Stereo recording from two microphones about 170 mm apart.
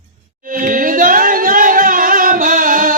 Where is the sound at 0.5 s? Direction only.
55° right (ahead or behind).